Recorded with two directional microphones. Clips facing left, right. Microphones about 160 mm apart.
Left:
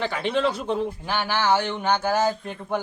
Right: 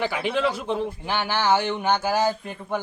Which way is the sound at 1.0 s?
15° right (ahead or behind).